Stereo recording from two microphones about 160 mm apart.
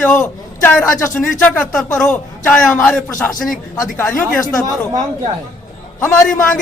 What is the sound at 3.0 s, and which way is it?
A man's voice, 15° left (ahead or behind).